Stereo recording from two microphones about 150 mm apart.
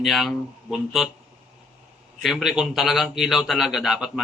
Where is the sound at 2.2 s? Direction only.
Centre (ahead or behind).